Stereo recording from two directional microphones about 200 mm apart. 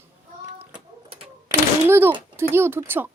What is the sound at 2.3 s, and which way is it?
Speech, 10° right (ahead or behind).